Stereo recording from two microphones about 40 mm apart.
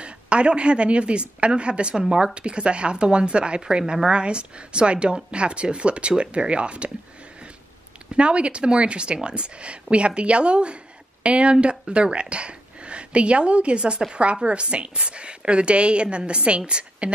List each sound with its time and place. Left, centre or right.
0.0 s a woman's voice: right
8.2 s a woman's voice: right
11.5 s speech: centre
11.9 s a woman's voice: right